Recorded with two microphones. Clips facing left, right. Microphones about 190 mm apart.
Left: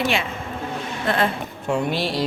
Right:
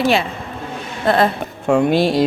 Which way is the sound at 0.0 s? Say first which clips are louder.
Right 6 dB; 35° right (ahead or behind).